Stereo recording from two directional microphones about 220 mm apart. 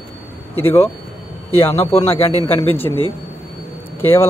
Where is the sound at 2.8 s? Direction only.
25° left (ahead or behind).